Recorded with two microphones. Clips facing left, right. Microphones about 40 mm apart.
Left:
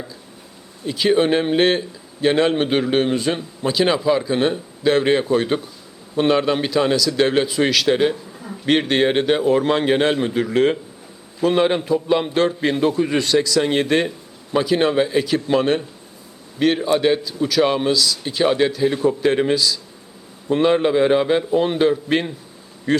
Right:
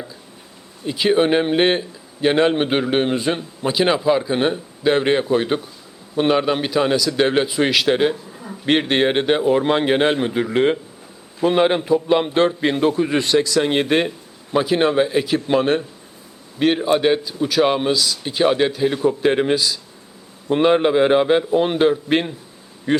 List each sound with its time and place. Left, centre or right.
0.9 s a man's voice: centre